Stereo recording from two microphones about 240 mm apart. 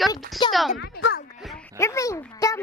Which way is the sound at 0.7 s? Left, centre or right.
Left.